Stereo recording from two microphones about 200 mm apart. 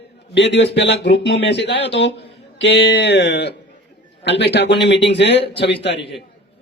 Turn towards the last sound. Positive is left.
turn(degrees=60)  # may be behind; listen again after turning